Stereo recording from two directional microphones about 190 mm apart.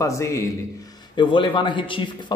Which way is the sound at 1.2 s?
25° left (ahead or behind).